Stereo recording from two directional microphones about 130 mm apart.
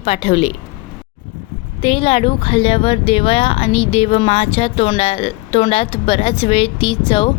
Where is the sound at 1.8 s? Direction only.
45° left (ahead or behind).